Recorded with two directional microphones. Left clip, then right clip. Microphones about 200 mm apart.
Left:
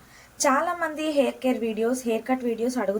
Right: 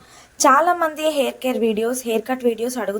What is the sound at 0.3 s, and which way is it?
A woman's voice, 40° right (ahead or behind).